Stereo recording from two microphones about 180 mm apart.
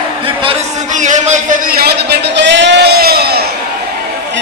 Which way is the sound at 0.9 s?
45° right (ahead or behind).